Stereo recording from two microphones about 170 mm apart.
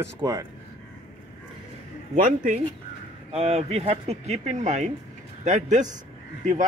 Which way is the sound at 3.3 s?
35° right (ahead or behind).